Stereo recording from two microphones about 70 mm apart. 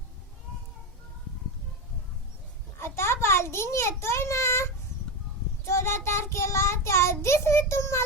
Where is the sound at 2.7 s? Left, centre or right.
Left.